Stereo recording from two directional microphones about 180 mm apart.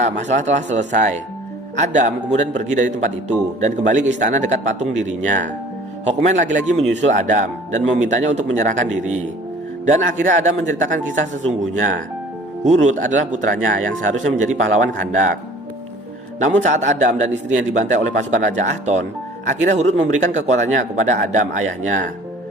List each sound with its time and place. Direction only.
0.0 s a man's voice: 40° right (ahead or behind)
12.6 s a man's voice: 40° right (ahead or behind)
16.4 s a man's voice: 40° right (ahead or behind)